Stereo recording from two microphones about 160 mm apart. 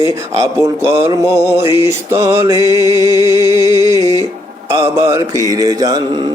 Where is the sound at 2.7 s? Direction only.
25° left (ahead or behind).